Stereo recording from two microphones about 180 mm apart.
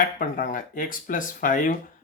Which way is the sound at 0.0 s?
50° left (ahead or behind).